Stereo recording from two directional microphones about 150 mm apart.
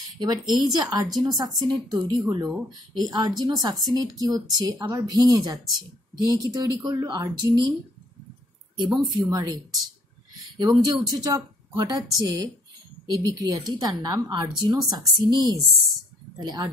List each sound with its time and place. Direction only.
0.2 s a woman's voice: 25° right (ahead or behind)
8.8 s speech: centre (ahead or behind)
9.1 s a woman's voice: 25° right (ahead or behind)
10.6 s a woman's voice: 25° right (ahead or behind)